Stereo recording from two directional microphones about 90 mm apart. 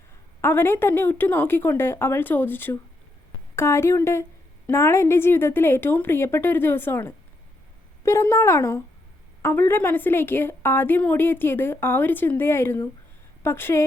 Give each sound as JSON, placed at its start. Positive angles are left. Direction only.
{"t": 0.4, "sound": "a woman's voice", "side_deg": 25}